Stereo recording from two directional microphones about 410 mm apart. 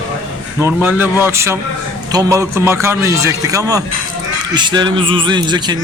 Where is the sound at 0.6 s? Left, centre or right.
Centre.